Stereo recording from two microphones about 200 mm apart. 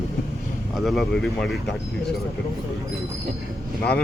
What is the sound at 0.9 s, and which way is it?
Speech, centre (ahead or behind).